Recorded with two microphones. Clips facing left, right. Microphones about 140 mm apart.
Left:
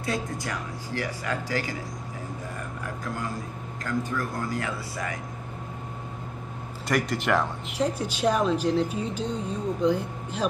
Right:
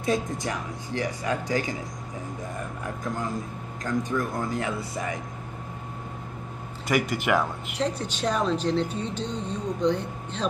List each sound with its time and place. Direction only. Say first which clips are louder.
0.0 s speech: right 4 dB; 20° right (ahead or behind)
3.8 s speech: right 2 dB; 20° right (ahead or behind)
6.9 s speech: right 1 dB; 5° right (ahead or behind)
7.8 s a woman's voice: left 2 dB; 10° left (ahead or behind)